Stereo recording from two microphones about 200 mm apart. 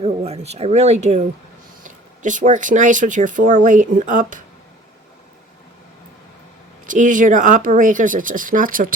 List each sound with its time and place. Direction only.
0.0 s speech: 30° right (ahead or behind)
2.2 s speech: 40° right (ahead or behind)
6.8 s speech: 40° right (ahead or behind)